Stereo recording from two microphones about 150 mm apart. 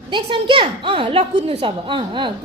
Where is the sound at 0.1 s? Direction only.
35° right (ahead or behind).